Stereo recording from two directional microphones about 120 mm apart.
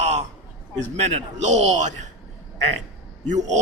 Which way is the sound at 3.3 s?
85° right.